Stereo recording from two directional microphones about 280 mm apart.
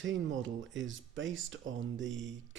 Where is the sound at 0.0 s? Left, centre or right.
Right.